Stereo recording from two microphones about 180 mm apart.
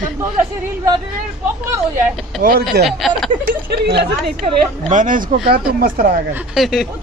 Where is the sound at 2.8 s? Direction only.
Centre (ahead or behind).